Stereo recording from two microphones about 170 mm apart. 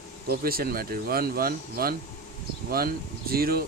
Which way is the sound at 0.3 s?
60° right (ahead or behind).